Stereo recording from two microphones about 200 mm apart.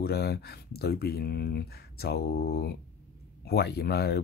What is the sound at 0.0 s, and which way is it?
Speech, 55° left (ahead or behind).